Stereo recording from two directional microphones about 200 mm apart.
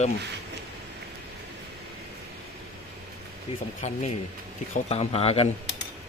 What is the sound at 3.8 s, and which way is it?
Speech, 35° left (ahead or behind).